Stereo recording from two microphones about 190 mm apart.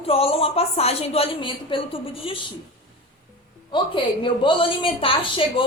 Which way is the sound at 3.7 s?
25° left (ahead or behind).